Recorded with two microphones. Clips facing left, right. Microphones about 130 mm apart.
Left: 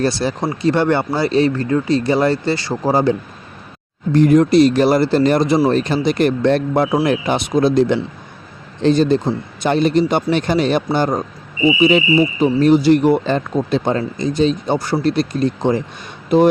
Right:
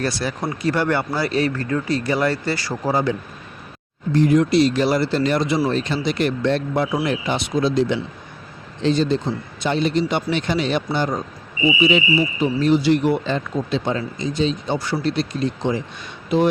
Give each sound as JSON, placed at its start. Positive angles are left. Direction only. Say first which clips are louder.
{"t": 0.0, "sound": "speech", "louder": "left 5 dB", "side_deg": 30}
{"t": 4.1, "sound": "speech", "louder": "left 5 dB", "side_deg": 50}